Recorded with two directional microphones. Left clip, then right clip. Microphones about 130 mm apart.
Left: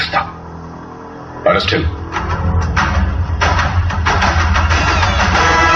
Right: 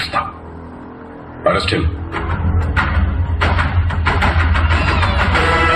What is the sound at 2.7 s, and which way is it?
Music, 40° right (ahead or behind).